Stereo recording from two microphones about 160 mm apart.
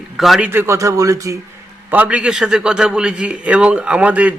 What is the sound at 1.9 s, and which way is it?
A man's voice, 10° right (ahead or behind).